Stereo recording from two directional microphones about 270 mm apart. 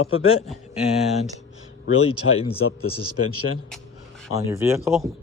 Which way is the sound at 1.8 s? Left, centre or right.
Left.